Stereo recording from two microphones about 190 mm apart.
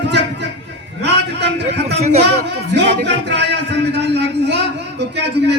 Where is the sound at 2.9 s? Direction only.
65° right (ahead or behind).